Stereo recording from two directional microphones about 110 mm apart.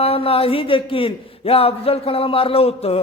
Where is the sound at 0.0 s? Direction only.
60° left (ahead or behind).